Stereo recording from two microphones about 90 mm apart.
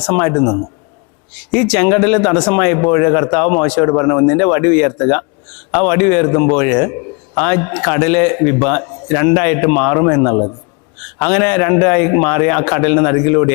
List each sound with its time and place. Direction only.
0.0 s a man's voice: 20° left (ahead or behind)